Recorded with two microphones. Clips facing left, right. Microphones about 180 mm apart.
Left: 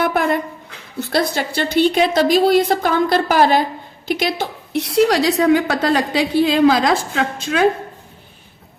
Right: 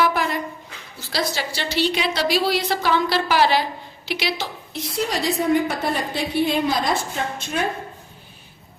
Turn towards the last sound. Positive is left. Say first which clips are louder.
# left 6 dB
turn(degrees=90)